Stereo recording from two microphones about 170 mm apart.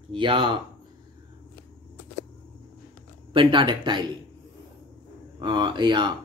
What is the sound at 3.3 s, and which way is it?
Speech, 30° right (ahead or behind).